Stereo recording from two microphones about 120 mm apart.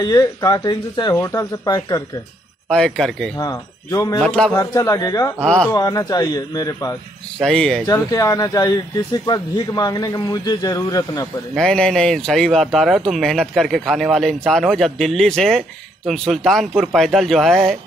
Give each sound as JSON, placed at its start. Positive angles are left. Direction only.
{"t": 0.0, "sound": "speech", "side_deg": 30}
{"t": 1.1, "sound": "speech", "side_deg": 25}
{"t": 2.7, "sound": "speech", "side_deg": 5}
{"t": 3.3, "sound": "speech", "side_deg": 30}
{"t": 4.2, "sound": "a man's voice", "side_deg": 5}
{"t": 4.6, "sound": "speech", "side_deg": 30}
{"t": 5.4, "sound": "a man's voice", "side_deg": 5}
{"t": 5.7, "sound": "speech", "side_deg": 30}
{"t": 7.3, "sound": "speech", "side_deg": 5}
{"t": 7.8, "sound": "speech", "side_deg": 30}
{"t": 11.5, "sound": "speech", "side_deg": 5}